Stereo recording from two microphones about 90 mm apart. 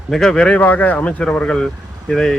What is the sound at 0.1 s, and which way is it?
Speech, 5° left (ahead or behind).